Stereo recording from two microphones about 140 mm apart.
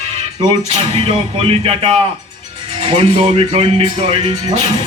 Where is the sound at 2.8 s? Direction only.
45° right (ahead or behind).